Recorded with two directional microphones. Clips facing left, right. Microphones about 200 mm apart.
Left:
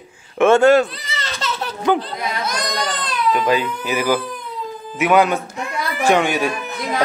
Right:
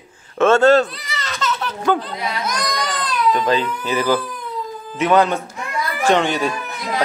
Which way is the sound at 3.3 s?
10° left (ahead or behind).